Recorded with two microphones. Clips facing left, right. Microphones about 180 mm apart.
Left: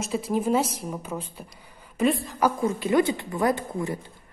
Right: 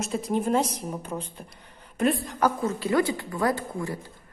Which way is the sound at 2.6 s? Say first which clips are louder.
Left 2 dB; 20° left (ahead or behind).